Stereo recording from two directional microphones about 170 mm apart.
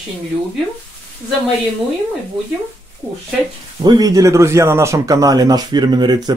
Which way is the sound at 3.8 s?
25° right (ahead or behind).